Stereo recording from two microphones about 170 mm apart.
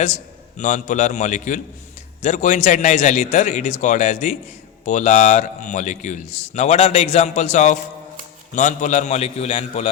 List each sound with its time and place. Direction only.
0.0 s a man's voice: 45° left (ahead or behind)